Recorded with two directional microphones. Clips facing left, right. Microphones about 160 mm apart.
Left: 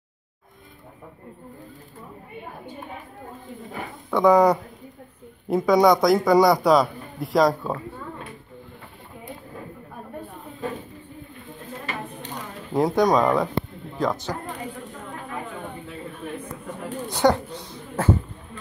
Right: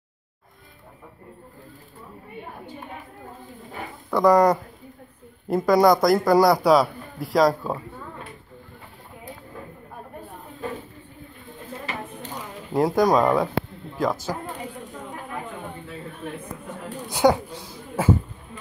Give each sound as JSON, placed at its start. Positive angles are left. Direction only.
{"t": 4.1, "sound": "a man's voice", "side_deg": 0}
{"t": 12.0, "sound": "a sound", "side_deg": -5}
{"t": 13.9, "sound": "a man's voice", "side_deg": -5}
{"t": 16.9, "sound": "speech", "side_deg": -10}